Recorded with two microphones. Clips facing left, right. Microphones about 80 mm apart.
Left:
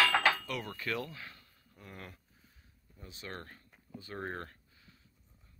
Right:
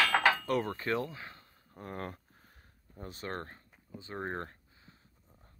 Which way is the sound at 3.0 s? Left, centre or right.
Right.